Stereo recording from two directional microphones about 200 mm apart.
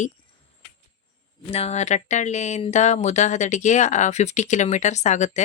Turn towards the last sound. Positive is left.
turn(degrees=35)  # may be behind; listen again after turning